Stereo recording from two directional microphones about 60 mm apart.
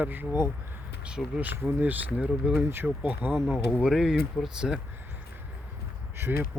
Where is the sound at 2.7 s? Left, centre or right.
Right.